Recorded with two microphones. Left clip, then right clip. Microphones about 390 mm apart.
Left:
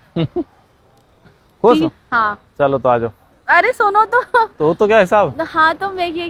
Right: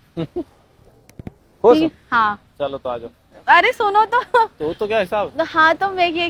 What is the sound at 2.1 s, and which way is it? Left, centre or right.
Speech, centre.